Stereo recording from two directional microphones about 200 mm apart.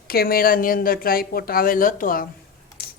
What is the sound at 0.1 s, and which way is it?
A woman's voice, 50° left (ahead or behind).